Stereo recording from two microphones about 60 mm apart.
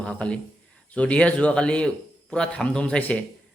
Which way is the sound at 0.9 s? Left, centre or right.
Centre.